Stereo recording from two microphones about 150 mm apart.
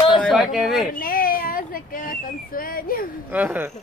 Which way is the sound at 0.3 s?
5° right (ahead or behind).